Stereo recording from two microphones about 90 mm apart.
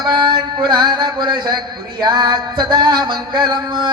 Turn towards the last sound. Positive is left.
turn(degrees=-60)  # may be behind; listen again after turning